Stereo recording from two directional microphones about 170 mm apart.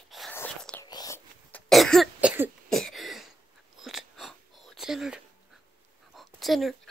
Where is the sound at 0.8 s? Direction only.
20° left (ahead or behind).